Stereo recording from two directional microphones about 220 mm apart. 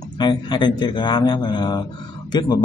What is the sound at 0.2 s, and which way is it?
A man's voice, 20° left (ahead or behind).